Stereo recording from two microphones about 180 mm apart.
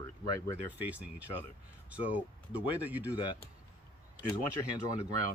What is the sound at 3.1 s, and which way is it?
Speech, 25° left (ahead or behind).